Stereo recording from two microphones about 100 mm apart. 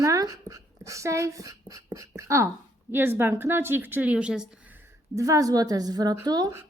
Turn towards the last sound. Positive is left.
turn(degrees=-40)  # may be behind; listen again after turning